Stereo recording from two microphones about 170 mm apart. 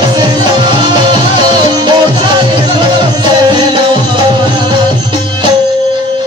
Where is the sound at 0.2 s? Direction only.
25° right (ahead or behind).